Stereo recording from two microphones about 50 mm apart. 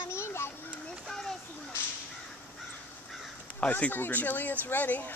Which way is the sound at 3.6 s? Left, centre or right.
Left.